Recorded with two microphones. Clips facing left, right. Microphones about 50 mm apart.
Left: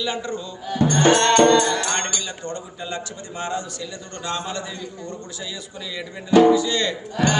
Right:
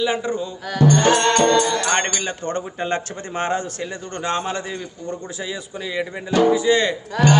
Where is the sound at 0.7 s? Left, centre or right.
Right.